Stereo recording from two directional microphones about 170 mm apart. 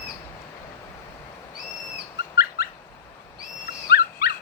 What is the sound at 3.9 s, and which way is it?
Dog, 70° left (ahead or behind).